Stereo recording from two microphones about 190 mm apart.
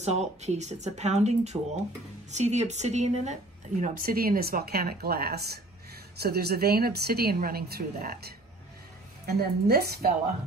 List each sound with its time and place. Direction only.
0.0 s speech: 35° right (ahead or behind)
3.8 s a woman's voice: 50° right (ahead or behind)